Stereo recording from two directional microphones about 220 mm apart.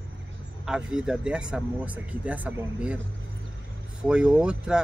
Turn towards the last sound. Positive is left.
turn(degrees=-5)  # may be behind; listen again after turning